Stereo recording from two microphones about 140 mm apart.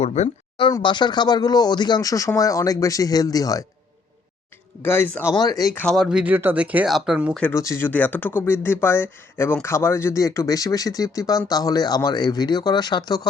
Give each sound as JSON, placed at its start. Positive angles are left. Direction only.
{"t": 0.0, "sound": "speech", "side_deg": 50}
{"t": 0.7, "sound": "speech", "side_deg": 35}
{"t": 4.8, "sound": "speech", "side_deg": 15}
{"t": 5.4, "sound": "speech", "side_deg": 25}
{"t": 5.7, "sound": "speech", "side_deg": 5}
{"t": 7.5, "sound": "speech", "side_deg": 20}